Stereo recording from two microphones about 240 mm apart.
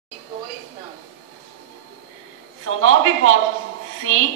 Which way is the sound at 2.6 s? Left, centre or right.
Right.